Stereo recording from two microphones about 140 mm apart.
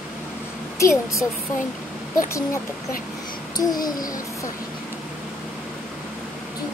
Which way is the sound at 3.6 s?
30° left (ahead or behind).